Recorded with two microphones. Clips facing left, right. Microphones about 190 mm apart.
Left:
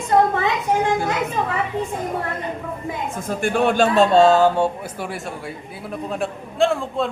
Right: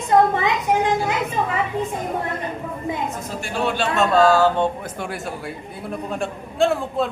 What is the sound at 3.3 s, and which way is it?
Speech, 55° left (ahead or behind).